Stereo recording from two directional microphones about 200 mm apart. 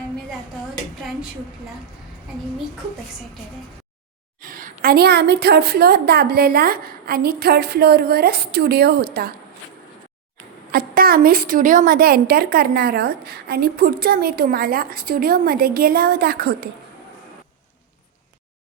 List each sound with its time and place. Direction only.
4.4 s a woman's voice: 45° right (ahead or behind)
10.7 s a woman's voice: 45° right (ahead or behind)